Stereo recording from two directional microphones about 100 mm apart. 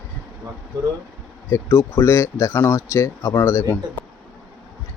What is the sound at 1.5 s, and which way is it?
Speech, 25° left (ahead or behind).